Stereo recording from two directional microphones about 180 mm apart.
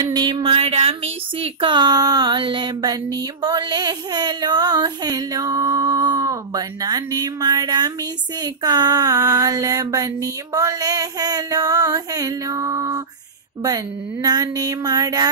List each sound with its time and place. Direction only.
0.0 s speech: 25° right (ahead or behind)